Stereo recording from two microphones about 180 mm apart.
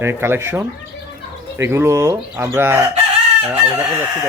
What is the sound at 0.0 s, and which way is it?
Speech, 15° right (ahead or behind).